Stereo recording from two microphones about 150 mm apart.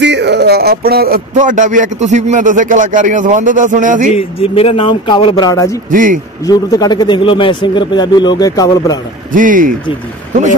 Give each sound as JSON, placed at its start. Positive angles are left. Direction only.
{"t": 0.4, "sound": "speech", "side_deg": -90}
{"t": 4.1, "sound": "speech", "side_deg": 40}
{"t": 5.9, "sound": "speech", "side_deg": -60}
{"t": 6.4, "sound": "a man's voice", "side_deg": 25}
{"t": 9.3, "sound": "speech", "side_deg": -65}